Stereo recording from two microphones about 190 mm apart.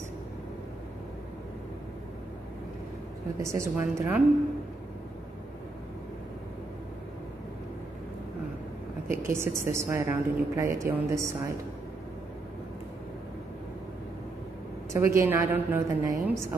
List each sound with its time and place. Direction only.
3.3 s a woman's voice: 15° right (ahead or behind)
9.3 s a woman's voice: 15° right (ahead or behind)
14.9 s a woman's voice: 15° right (ahead or behind)